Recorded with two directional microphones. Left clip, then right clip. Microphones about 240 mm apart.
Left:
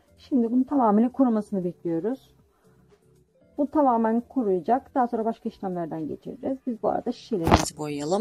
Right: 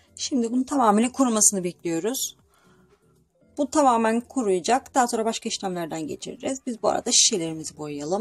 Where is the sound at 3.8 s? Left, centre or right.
Centre.